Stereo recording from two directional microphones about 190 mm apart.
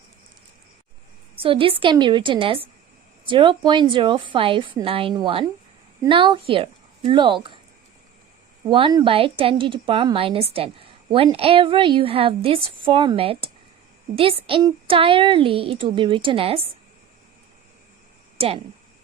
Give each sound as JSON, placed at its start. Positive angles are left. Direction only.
{"t": 1.4, "sound": "a woman's voice", "side_deg": -30}
{"t": 8.7, "sound": "a woman's voice", "side_deg": -25}
{"t": 18.3, "sound": "speech", "side_deg": -30}